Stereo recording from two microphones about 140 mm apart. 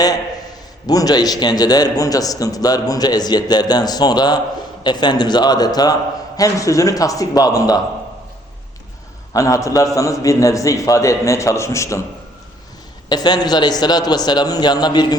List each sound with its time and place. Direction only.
0.9 s a man's voice: 25° left (ahead or behind)
9.3 s a man's voice: 25° left (ahead or behind)
13.1 s a man's voice: 30° left (ahead or behind)